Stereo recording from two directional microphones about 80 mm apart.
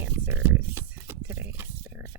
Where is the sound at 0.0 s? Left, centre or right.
Right.